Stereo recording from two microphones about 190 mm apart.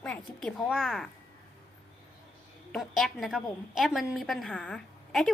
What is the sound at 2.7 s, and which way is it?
A woman's voice, centre (ahead or behind).